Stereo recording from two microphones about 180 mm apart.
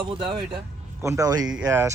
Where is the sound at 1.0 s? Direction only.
15° right (ahead or behind).